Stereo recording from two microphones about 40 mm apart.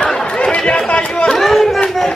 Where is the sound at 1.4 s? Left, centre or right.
Centre.